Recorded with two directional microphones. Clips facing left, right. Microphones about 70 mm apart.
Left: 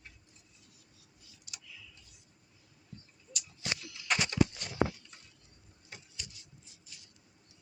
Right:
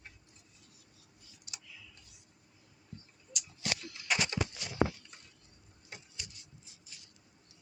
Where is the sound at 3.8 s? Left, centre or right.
Right.